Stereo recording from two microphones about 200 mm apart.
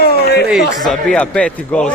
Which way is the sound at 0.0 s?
50° left (ahead or behind).